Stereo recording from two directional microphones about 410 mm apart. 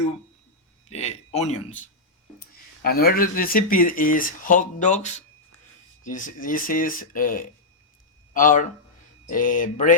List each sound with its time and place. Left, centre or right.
0.9 s speech: centre
2.8 s speech: left